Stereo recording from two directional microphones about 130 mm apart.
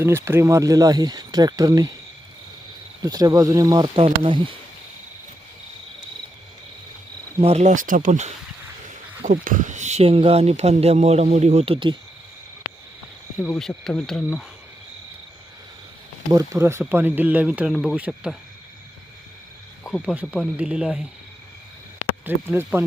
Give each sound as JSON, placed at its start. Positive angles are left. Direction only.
{"t": 0.0, "sound": "speech", "side_deg": -20}
{"t": 3.0, "sound": "speech", "side_deg": -30}
{"t": 3.9, "sound": "speech", "side_deg": -40}
{"t": 7.4, "sound": "speech", "side_deg": -60}
{"t": 9.2, "sound": "speech", "side_deg": -85}
{"t": 13.6, "sound": "speech", "side_deg": 5}
{"t": 16.3, "sound": "speech", "side_deg": -25}
{"t": 19.8, "sound": "speech", "side_deg": 0}
{"t": 22.2, "sound": "speech", "side_deg": -15}